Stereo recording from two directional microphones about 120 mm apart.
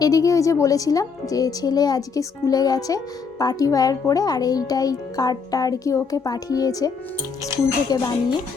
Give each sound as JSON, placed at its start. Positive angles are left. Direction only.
{"t": 0.0, "sound": "a woman's voice", "side_deg": 30}